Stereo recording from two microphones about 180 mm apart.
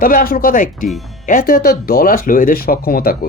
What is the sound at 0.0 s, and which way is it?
Speech, 55° left (ahead or behind).